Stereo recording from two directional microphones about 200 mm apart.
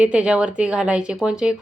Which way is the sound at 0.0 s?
5° right (ahead or behind).